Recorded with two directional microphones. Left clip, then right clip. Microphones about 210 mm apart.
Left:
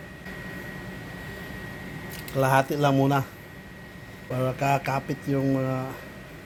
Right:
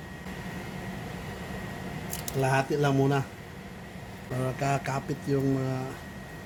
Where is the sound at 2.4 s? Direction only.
20° left (ahead or behind).